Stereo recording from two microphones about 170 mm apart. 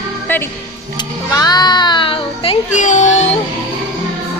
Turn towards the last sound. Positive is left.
turn(degrees=45)  # may be behind; listen again after turning